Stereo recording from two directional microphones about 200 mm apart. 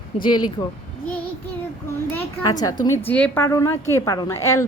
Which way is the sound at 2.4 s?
20° left (ahead or behind).